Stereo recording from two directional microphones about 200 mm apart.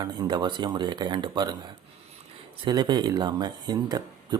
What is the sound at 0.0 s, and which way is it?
Speech, 20° right (ahead or behind).